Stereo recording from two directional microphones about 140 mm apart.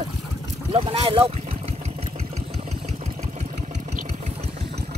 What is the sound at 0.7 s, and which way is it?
Speech, 45° right (ahead or behind).